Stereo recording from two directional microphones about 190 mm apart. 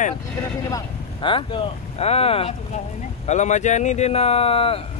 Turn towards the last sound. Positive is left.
turn(degrees=30)  # may be behind; listen again after turning